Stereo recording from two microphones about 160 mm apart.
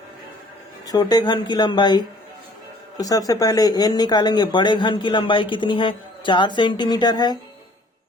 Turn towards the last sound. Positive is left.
turn(degrees=25)  # may be behind; listen again after turning